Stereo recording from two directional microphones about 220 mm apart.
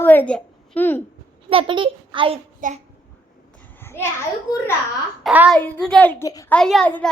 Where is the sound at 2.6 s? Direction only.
35° right (ahead or behind).